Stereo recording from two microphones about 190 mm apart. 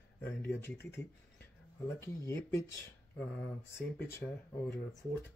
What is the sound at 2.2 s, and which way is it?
Speech, 15° left (ahead or behind).